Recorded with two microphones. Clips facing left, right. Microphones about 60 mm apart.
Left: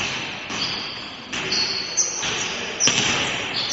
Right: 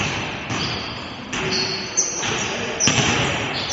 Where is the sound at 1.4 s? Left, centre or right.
Centre.